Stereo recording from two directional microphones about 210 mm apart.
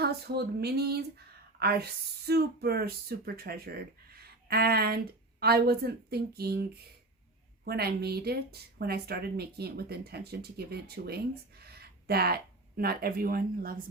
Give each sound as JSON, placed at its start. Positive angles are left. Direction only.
{"t": 0.0, "sound": "speech", "side_deg": -50}